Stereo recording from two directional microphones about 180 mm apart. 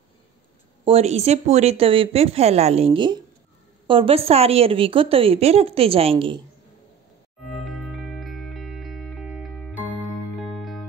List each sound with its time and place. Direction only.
0.8 s a woman's voice: 35° right (ahead or behind)
7.4 s music: centre (ahead or behind)